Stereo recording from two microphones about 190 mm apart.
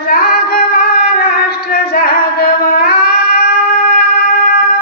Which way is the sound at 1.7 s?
55° left (ahead or behind).